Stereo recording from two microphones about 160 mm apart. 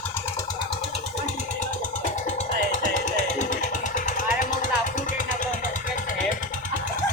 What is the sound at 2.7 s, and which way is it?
Vehicle, 50° left (ahead or behind).